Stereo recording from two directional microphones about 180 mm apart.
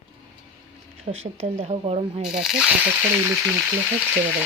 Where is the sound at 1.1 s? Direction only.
90° right.